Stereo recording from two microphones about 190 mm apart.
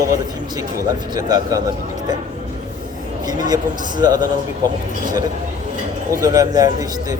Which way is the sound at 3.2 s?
20° right (ahead or behind).